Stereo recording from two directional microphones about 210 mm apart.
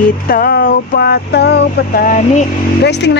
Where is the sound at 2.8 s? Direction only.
55° left (ahead or behind).